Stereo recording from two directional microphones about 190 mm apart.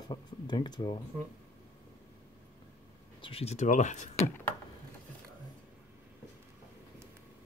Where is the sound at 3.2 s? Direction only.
30° left (ahead or behind).